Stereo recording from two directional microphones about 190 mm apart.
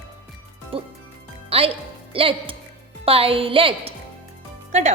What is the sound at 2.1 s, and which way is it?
A woman's voice, 30° right (ahead or behind).